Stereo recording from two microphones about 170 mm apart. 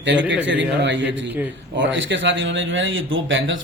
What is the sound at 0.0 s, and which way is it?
A man's voice, 90° right.